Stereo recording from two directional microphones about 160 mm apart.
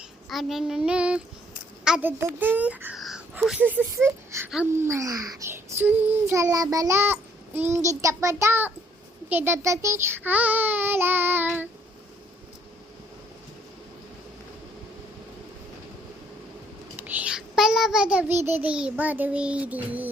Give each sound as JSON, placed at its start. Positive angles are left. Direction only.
{"t": 0.3, "sound": "child singing", "side_deg": 0}
{"t": 1.8, "sound": "a child's voice", "side_deg": -10}
{"t": 4.4, "sound": "child singing", "side_deg": -5}
{"t": 4.7, "sound": "child singing", "side_deg": -15}
{"t": 17.2, "sound": "a child's voice", "side_deg": -5}
{"t": 18.4, "sound": "child singing", "side_deg": -10}